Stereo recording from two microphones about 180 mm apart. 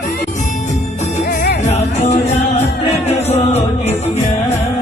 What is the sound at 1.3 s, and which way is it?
Music, 60° left (ahead or behind).